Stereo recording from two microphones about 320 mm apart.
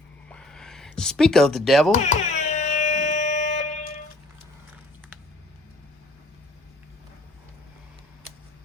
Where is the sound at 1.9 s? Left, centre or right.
Left.